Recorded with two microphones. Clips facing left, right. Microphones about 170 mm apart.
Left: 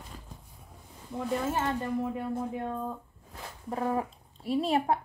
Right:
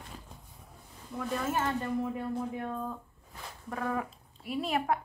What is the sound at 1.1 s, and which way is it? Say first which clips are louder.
Speech: left 2 dB; 25° left (ahead or behind).